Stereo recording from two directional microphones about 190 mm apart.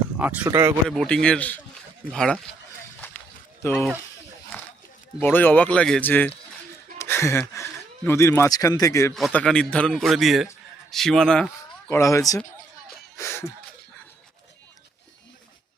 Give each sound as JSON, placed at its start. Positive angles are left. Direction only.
{"t": 0.2, "sound": "speech", "side_deg": -10}
{"t": 0.9, "sound": "speech", "side_deg": 5}
{"t": 3.6, "sound": "speech", "side_deg": 10}
{"t": 5.2, "sound": "speech", "side_deg": 10}
{"t": 9.1, "sound": "speech", "side_deg": 0}
{"t": 11.9, "sound": "speech", "side_deg": 15}
{"t": 13.1, "sound": "a sound", "side_deg": 15}